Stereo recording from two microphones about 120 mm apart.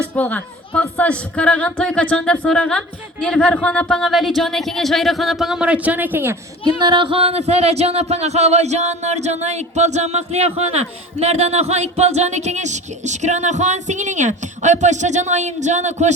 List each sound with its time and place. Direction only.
0.2 s a woman's voice: 10° left (ahead or behind); by 6.3 s 15° right (ahead or behind)
6.7 s speech: 35° right (ahead or behind); by 16.1 s 75° right (ahead or behind)